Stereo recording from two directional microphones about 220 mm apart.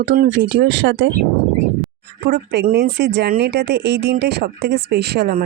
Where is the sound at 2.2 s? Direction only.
50° right (ahead or behind).